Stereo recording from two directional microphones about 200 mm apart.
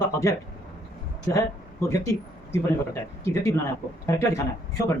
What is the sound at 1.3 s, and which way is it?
Speech, 15° left (ahead or behind).